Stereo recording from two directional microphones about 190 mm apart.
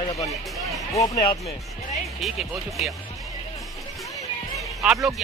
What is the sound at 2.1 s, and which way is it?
Music, centre (ahead or behind).